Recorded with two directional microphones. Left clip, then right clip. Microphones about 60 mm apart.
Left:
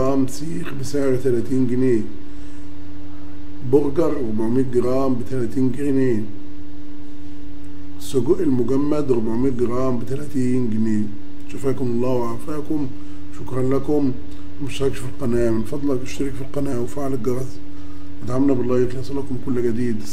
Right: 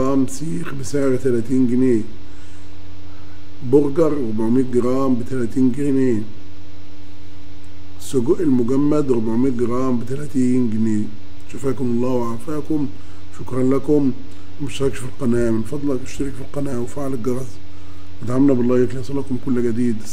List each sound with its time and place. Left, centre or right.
0.0 s a man's voice: right
3.7 s a man's voice: right
8.1 s a man's voice: right